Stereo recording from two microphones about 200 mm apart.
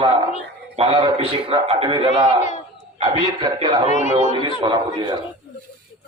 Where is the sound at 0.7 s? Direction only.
25° right (ahead or behind).